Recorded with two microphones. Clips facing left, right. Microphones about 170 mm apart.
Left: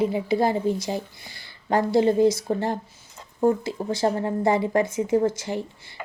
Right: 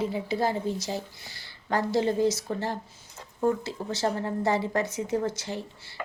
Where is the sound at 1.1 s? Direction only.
55° left (ahead or behind).